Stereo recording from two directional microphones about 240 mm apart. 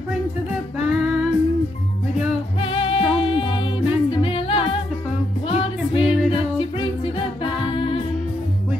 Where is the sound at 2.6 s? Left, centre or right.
Left.